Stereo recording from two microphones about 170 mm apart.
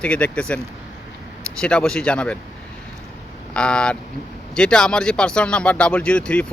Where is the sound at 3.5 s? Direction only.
5° left (ahead or behind).